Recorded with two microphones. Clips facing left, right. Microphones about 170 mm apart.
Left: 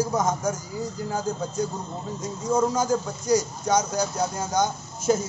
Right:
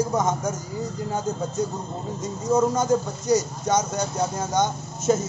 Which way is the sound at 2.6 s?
Centre (ahead or behind).